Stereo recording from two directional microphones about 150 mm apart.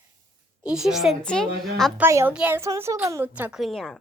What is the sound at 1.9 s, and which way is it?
A child's voice, 15° right (ahead or behind).